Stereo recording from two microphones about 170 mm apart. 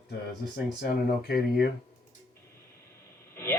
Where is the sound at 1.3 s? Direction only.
65° left (ahead or behind).